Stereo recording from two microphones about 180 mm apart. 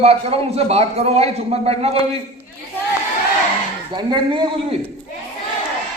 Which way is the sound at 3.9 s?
25° right (ahead or behind).